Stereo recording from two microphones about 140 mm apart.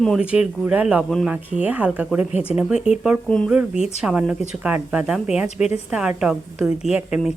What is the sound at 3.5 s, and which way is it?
A woman's voice, 5° right (ahead or behind).